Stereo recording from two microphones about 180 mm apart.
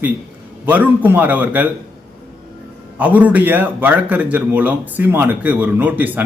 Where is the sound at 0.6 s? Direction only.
10° right (ahead or behind).